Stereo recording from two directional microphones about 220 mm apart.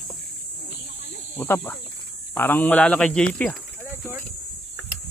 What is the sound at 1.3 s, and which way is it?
Speech, 10° left (ahead or behind).